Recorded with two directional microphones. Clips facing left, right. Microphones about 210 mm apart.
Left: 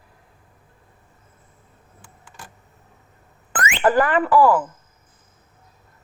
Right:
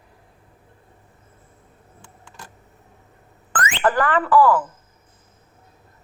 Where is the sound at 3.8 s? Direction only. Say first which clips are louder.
Left 3 dB; 25° left (ahead or behind).